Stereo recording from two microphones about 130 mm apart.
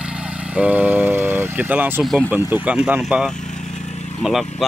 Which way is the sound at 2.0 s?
Centre (ahead or behind).